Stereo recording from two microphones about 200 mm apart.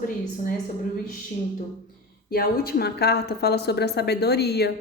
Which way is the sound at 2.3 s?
50° left (ahead or behind).